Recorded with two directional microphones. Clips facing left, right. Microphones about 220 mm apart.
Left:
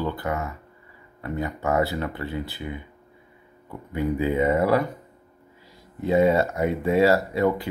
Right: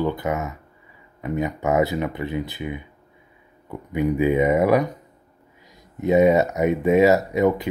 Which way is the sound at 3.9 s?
15° right (ahead or behind).